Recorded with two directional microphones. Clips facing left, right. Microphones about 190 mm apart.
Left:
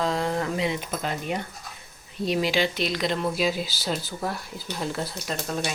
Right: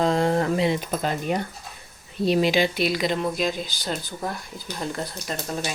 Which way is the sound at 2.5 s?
10° right (ahead or behind).